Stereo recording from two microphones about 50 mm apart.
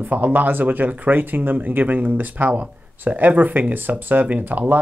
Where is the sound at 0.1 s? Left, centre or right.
Right.